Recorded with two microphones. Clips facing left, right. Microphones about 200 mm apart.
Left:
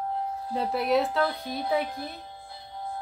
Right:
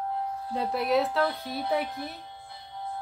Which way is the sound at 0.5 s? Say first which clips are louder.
Left 1 dB; centre (ahead or behind).